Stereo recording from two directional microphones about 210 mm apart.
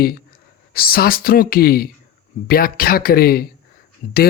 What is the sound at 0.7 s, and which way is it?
Speech, 45° left (ahead or behind).